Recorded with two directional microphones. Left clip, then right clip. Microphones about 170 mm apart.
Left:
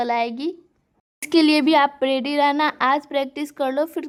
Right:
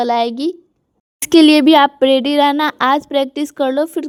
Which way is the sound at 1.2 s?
45° right (ahead or behind).